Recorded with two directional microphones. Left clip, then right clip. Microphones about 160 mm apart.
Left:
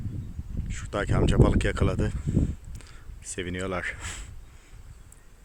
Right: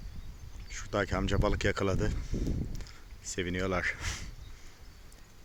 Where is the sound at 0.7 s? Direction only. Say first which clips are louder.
Left 2 dB; centre (ahead or behind).